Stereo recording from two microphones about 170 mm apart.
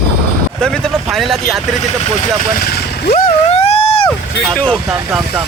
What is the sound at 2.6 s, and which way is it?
Speech, 65° left (ahead or behind).